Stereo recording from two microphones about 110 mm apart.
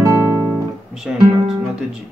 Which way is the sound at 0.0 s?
20° right (ahead or behind).